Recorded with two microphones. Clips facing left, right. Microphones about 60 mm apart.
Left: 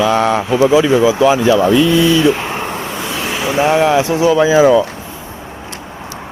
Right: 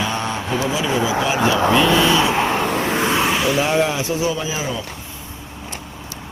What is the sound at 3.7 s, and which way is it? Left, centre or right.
Speech, left.